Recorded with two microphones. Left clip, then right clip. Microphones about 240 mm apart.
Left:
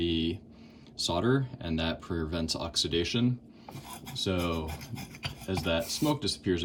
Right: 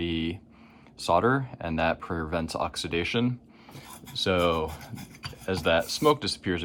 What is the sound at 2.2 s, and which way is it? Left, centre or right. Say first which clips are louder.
Speech: right 6 dB; right.